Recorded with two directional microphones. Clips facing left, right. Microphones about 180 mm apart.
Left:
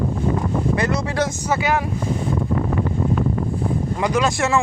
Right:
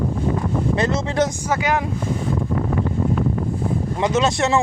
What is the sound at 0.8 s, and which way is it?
Speech, 20° right (ahead or behind).